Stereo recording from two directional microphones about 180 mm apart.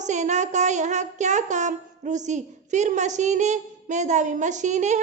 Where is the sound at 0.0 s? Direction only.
40° right (ahead or behind).